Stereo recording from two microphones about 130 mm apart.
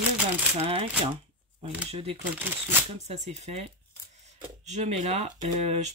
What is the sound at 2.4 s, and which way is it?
Speech, 15° right (ahead or behind).